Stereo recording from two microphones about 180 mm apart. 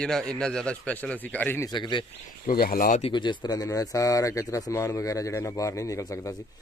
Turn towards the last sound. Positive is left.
turn(degrees=15)  # may be behind; listen again after turning